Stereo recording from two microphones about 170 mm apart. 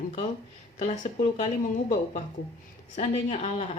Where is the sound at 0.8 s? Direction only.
40° left (ahead or behind).